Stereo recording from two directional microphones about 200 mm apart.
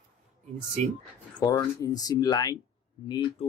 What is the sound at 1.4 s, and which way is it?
Speech, 15° left (ahead or behind).